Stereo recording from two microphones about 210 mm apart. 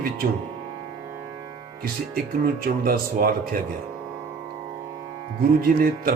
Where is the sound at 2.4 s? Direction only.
45° right (ahead or behind).